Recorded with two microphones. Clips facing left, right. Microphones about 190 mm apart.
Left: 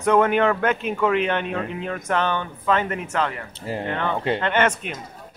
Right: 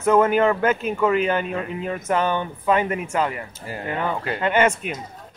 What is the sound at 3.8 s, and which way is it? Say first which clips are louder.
Speech: even; 10° right (ahead or behind).